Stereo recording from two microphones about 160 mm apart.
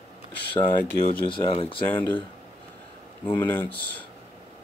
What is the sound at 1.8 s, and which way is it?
Speech, 10° left (ahead or behind).